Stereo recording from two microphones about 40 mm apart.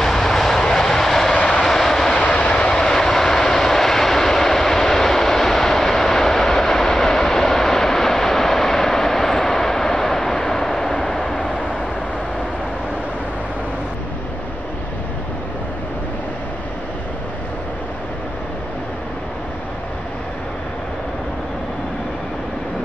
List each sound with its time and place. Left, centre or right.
0.0 s vehicle: centre
1.4 s vehicle: centre
1.7 s vehicle: centre
2.1 s vehicle: left
2.8 s vehicle: centre